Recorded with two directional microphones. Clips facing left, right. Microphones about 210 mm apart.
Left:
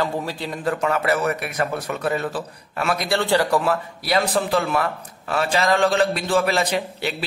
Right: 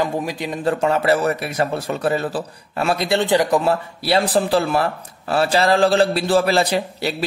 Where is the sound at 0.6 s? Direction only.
30° right (ahead or behind).